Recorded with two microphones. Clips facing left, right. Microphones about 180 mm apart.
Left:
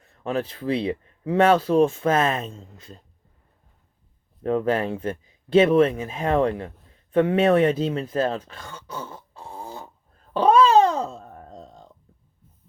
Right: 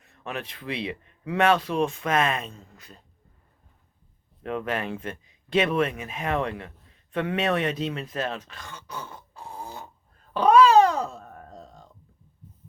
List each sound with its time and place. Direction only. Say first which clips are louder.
0.0 s speech: left 8 dB; 30° left (ahead or behind)
4.4 s speech: left 7 dB; 30° left (ahead or behind)
10.3 s a sound: even; 25° left (ahead or behind)